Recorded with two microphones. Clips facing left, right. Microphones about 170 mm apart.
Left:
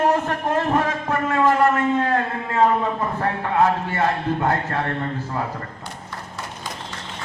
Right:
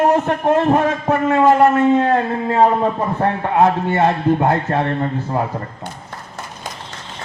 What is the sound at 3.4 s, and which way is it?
Speech, 25° right (ahead or behind).